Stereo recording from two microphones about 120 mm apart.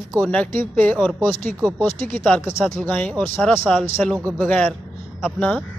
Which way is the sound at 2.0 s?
10° left (ahead or behind).